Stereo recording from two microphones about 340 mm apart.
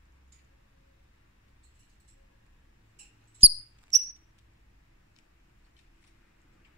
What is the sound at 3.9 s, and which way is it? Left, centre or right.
Cricket, centre.